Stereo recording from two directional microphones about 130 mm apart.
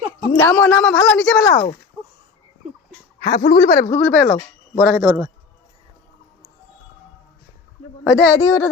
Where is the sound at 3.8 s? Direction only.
25° left (ahead or behind).